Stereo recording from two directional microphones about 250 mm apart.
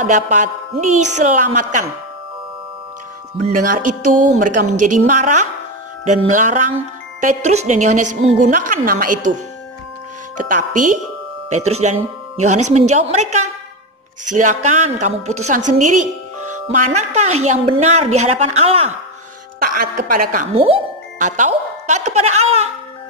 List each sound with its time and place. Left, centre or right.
0.0 s a woman's voice: right
3.4 s speech: right
4.7 s a woman's voice: right
5.0 s a woman's voice: right
10.5 s a woman's voice: right
16.0 s music: right
16.6 s a woman's voice: right
20.5 s speech: right